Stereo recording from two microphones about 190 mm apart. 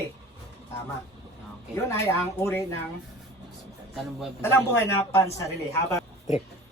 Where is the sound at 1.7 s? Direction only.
15° left (ahead or behind).